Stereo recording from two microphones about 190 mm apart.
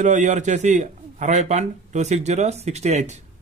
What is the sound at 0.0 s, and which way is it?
A man's voice, 40° right (ahead or behind).